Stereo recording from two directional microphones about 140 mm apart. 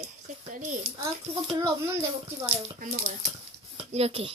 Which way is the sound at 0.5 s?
60° right (ahead or behind).